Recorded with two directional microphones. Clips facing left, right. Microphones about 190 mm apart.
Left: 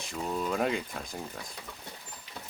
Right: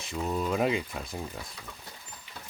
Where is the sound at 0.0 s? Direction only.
5° right (ahead or behind).